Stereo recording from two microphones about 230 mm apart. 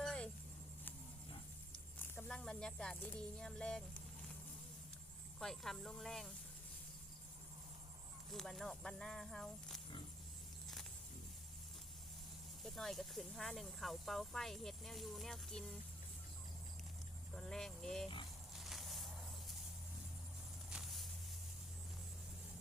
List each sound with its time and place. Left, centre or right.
0.0 s a sound: centre
2.0 s speech: centre
5.4 s speech: centre
8.3 s speech: centre
12.6 s speech: centre
17.3 s speech: centre
18.5 s a sound: centre
20.7 s vehicle: centre